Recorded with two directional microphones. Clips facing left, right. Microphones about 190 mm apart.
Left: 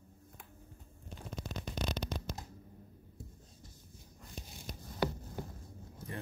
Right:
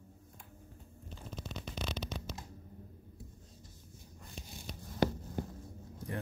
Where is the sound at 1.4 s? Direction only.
45° left (ahead or behind).